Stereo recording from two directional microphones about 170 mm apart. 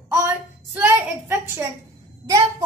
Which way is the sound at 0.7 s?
10° right (ahead or behind).